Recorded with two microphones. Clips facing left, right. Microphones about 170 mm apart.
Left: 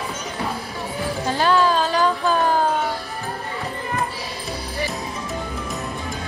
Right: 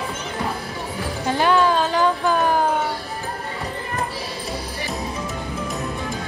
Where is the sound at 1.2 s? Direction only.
20° right (ahead or behind).